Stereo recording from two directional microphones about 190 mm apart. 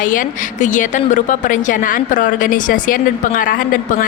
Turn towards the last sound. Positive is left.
turn(degrees=45)  # may be behind; listen again after turning